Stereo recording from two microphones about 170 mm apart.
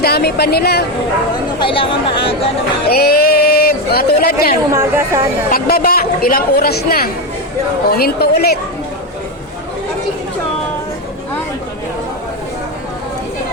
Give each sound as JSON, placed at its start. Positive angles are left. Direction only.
{"t": 0.0, "sound": "a woman's voice", "side_deg": 70}
{"t": 1.5, "sound": "speech", "side_deg": 30}
{"t": 2.9, "sound": "speech", "side_deg": 65}
{"t": 4.7, "sound": "speech", "side_deg": -15}
{"t": 5.5, "sound": "a woman's voice", "side_deg": 60}